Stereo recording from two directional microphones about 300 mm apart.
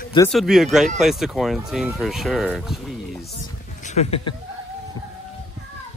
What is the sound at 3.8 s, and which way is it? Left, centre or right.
Speech, left.